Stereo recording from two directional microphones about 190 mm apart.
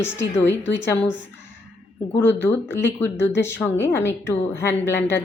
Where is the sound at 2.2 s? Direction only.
10° left (ahead or behind).